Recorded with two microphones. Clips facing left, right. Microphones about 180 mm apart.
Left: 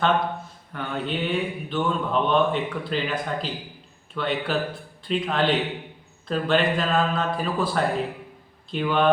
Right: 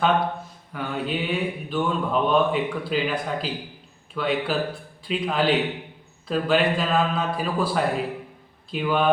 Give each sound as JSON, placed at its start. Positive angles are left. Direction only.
{"t": 0.7, "sound": "a man's voice", "side_deg": -5}